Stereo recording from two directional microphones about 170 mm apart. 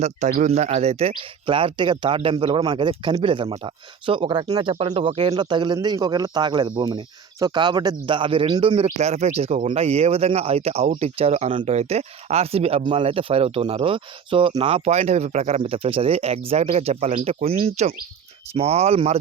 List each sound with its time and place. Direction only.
0.0 s speech: 40° right (ahead or behind)